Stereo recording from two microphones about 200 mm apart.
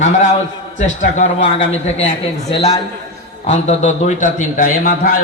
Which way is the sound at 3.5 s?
35° left (ahead or behind).